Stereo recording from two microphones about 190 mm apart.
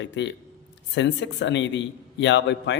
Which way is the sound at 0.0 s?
70° left (ahead or behind).